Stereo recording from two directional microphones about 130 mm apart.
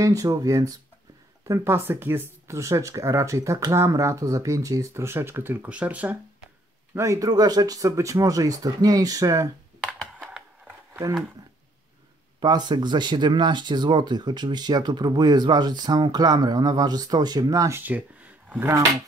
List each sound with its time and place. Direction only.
0.0 s speech: 25° right (ahead or behind); by 6.1 s 10° right (ahead or behind)
7.0 s speech: 25° right (ahead or behind)
12.4 s speech: 35° right (ahead or behind); by 18.8 s 15° right (ahead or behind)